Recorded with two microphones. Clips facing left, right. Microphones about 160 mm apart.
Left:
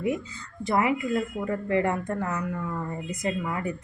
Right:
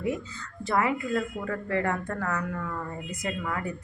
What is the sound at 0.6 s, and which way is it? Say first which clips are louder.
A woman's voice: left 2 dB; 15° left (ahead or behind).